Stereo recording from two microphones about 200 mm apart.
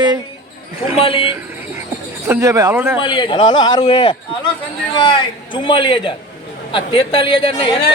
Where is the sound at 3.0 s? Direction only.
25° left (ahead or behind).